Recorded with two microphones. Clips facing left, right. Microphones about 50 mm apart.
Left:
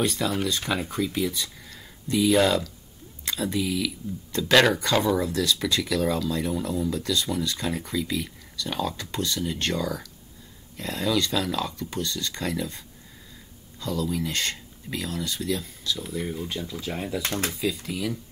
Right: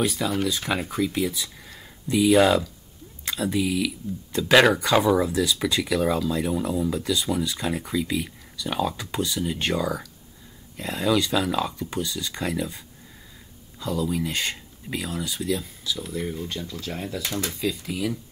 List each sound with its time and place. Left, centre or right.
0.0 s speech: centre
17.2 s speech: left
17.5 s speech: centre